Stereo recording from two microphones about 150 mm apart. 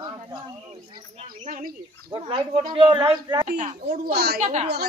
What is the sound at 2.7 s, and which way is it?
Speech, 35° right (ahead or behind).